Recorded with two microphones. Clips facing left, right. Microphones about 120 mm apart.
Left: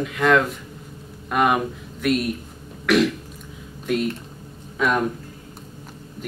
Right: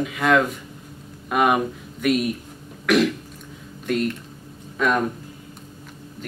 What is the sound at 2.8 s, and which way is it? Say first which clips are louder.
Cough: even; centre (ahead or behind).